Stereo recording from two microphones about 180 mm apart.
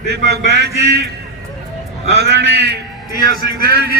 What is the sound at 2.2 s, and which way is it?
Speech, 65° right (ahead or behind).